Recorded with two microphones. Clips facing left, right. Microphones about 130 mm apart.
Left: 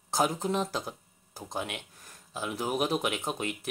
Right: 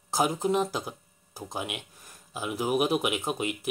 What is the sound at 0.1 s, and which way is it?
Speech, 5° right (ahead or behind).